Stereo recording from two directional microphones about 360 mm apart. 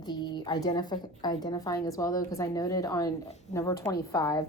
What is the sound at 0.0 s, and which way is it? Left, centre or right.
A woman's voice, centre.